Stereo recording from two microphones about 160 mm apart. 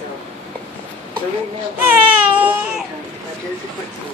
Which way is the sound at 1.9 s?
10° right (ahead or behind).